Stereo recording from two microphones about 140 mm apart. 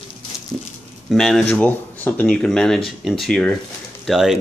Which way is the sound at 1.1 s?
Centre (ahead or behind).